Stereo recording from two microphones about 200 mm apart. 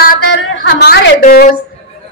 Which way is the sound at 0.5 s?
55° left (ahead or behind).